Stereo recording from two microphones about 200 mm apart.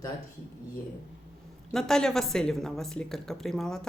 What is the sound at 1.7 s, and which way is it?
A woman's voice, 5° left (ahead or behind).